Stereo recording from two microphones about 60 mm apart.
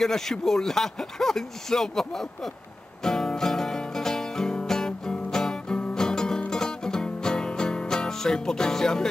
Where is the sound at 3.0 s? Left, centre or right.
Centre.